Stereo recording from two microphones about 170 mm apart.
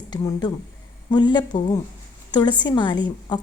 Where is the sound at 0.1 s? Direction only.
25° left (ahead or behind).